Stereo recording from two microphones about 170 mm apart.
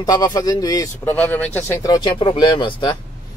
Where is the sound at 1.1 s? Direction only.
10° left (ahead or behind).